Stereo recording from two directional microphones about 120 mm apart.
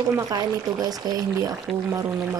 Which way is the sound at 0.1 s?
30° right (ahead or behind).